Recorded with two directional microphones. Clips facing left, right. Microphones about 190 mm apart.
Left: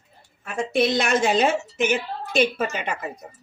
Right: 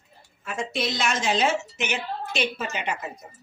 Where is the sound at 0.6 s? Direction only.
55° left (ahead or behind).